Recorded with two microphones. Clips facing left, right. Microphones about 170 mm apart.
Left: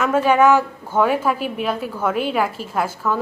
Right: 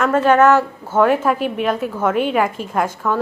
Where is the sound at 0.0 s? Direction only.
10° left (ahead or behind).